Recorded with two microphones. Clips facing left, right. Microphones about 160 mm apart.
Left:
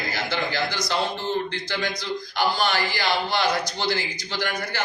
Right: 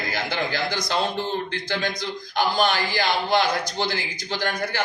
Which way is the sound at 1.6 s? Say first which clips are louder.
Right 1 dB; 50° right (ahead or behind).